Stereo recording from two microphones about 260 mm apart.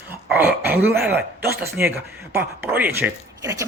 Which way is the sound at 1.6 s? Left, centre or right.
Centre.